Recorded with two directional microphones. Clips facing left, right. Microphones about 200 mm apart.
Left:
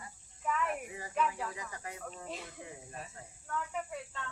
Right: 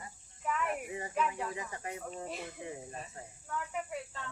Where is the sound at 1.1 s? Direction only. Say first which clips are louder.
Left 1 dB; 15° right (ahead or behind).